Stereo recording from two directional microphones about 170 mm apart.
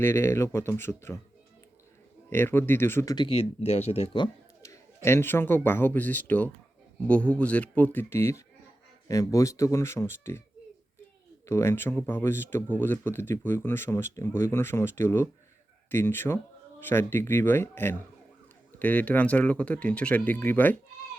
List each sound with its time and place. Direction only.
0.0 s speech: 15° left (ahead or behind)
2.3 s speech: 15° left (ahead or behind); by 4.3 s 35° left (ahead or behind)
5.0 s speech: 15° left (ahead or behind)
11.4 s speech: 15° left (ahead or behind)